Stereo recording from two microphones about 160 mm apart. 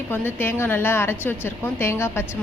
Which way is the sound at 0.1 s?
15° left (ahead or behind).